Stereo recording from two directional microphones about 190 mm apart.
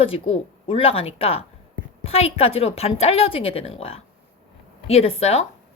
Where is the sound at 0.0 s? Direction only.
30° left (ahead or behind).